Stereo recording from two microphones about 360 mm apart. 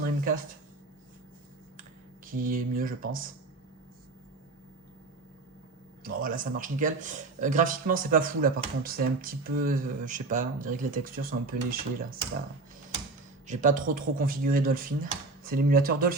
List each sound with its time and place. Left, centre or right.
2.2 s speech: right
6.0 s speech: right
13.5 s speech: right